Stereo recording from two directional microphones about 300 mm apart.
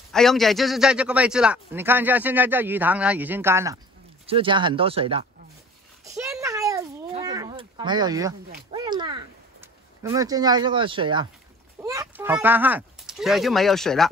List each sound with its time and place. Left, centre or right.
0.1 s a man's voice: centre
6.0 s a sound: centre
11.8 s speech: centre